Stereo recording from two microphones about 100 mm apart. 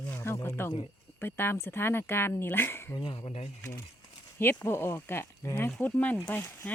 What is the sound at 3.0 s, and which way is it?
Speech, 65° left (ahead or behind).